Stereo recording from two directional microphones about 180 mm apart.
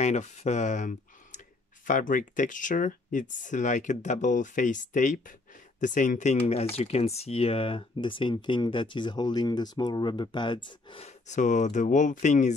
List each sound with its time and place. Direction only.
0.0 s speech: 40° left (ahead or behind)